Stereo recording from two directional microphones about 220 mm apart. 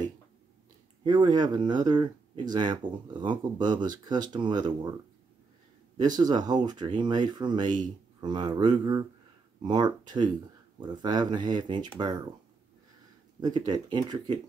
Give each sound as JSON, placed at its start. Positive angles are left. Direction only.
{"t": 1.0, "sound": "speech", "side_deg": -20}
{"t": 13.4, "sound": "speech", "side_deg": -20}